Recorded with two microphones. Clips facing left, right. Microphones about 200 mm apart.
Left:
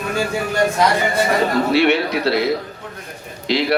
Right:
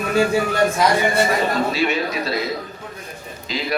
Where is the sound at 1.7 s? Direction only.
65° left (ahead or behind).